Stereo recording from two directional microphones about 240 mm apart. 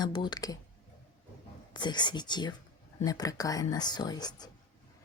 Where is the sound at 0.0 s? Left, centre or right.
Centre.